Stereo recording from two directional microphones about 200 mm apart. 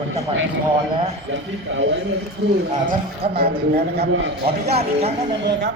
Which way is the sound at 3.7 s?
55° right (ahead or behind).